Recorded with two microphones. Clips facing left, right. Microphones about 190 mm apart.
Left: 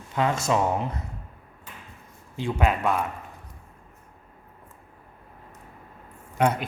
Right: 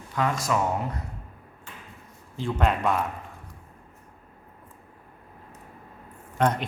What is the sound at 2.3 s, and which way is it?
Speech, 15° left (ahead or behind).